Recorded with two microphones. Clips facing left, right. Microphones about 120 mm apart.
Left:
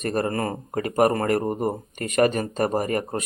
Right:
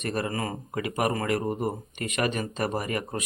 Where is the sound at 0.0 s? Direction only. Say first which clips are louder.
Left 5 dB; 40° left (ahead or behind).